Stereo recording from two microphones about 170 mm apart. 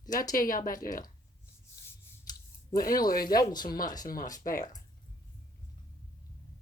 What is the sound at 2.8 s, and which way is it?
Speech, 60° left (ahead or behind).